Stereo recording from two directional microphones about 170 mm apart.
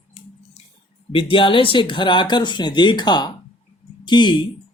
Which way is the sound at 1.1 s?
30° left (ahead or behind).